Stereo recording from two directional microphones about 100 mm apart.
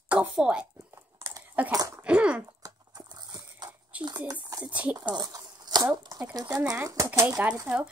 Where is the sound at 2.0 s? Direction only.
10° right (ahead or behind).